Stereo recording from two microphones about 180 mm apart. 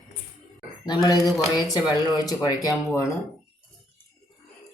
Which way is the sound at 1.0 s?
20° left (ahead or behind).